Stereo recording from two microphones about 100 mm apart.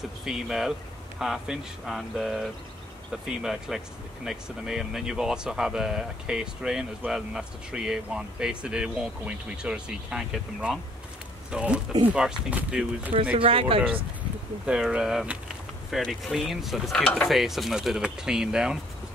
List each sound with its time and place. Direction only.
0.2 s mechanisms: 5° right (ahead or behind)
3.1 s speech: 5° right (ahead or behind)
13.1 s speech: 65° right (ahead or behind)
14.7 s speech: 5° right (ahead or behind)
16.0 s mechanisms: centre (ahead or behind)